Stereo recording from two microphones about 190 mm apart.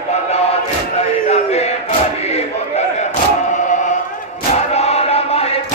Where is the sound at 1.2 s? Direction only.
35° left (ahead or behind).